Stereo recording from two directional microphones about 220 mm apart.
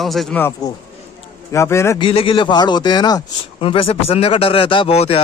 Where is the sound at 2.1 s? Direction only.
25° left (ahead or behind).